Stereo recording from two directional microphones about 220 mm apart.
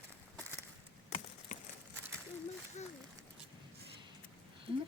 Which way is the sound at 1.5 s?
35° left (ahead or behind).